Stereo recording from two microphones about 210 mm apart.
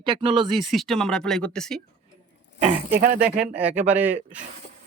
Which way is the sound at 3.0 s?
40° right (ahead or behind).